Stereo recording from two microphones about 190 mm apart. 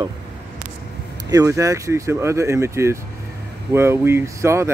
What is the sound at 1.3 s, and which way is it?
Speech, 15° right (ahead or behind).